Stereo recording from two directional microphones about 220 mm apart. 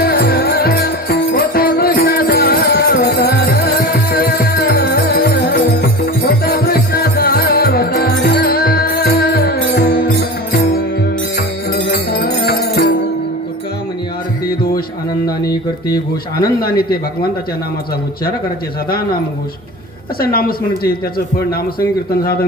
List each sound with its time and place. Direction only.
0.0 s music: 45° left (ahead or behind)
14.4 s music: 40° left (ahead or behind)
16.4 s a man's voice: 45° left (ahead or behind)
20.1 s a man's voice: 40° left (ahead or behind)